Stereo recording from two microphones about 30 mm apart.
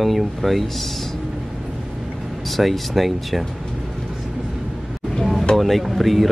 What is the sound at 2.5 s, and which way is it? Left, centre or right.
Speech, centre.